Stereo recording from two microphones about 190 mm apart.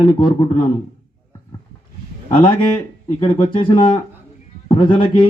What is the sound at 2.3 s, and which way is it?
A man's voice, 25° left (ahead or behind).